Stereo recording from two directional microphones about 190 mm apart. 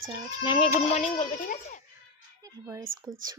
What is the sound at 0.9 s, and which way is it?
Speech, 35° left (ahead or behind).